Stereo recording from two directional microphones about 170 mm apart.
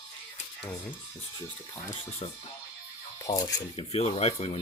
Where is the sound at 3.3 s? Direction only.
20° left (ahead or behind).